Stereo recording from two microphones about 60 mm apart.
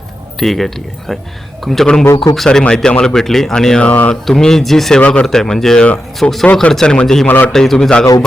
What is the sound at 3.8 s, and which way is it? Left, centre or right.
Speech, left.